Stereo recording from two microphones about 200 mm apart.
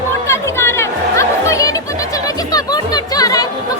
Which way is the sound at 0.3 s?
15° left (ahead or behind).